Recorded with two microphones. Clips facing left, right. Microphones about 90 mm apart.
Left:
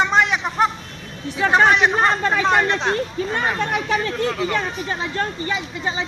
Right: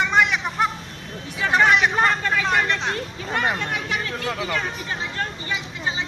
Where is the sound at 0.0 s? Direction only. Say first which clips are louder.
Left 2 dB; 35° left (ahead or behind).